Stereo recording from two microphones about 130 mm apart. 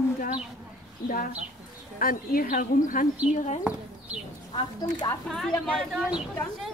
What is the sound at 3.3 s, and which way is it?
Speech, 65° left (ahead or behind).